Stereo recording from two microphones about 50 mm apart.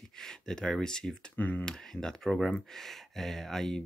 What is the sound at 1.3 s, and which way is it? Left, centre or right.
Speech, left.